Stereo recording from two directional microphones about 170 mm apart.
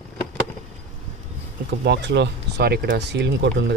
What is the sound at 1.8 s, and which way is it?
Speech, 90° right.